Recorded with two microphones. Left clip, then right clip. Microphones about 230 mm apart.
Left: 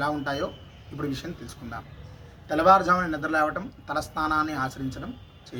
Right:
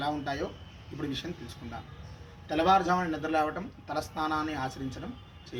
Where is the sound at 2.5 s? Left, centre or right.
Centre.